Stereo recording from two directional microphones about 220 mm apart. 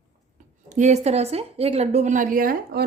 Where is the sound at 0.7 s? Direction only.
30° right (ahead or behind).